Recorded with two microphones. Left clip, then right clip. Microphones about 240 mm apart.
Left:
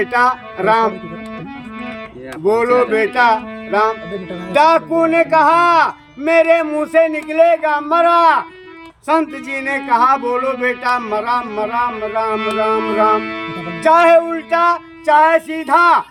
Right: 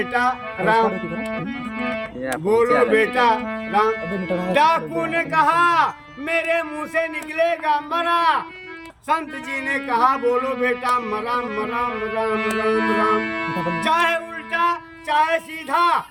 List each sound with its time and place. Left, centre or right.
0.0 s speech: centre
2.5 s speech: centre
4.1 s a woman's voice: centre
4.5 s speech: centre
12.3 s speech: centre
13.8 s speech: centre